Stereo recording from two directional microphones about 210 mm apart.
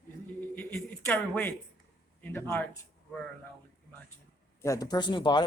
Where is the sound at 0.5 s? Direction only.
5° left (ahead or behind).